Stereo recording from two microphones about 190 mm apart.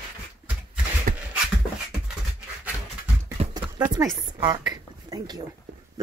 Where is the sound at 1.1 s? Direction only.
45° right (ahead or behind).